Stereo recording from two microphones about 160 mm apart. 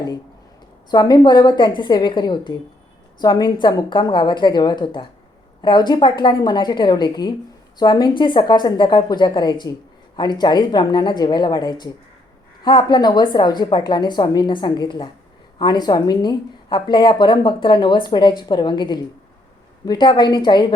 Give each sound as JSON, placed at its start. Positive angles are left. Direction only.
{"t": 0.9, "sound": "a woman's voice", "side_deg": 25}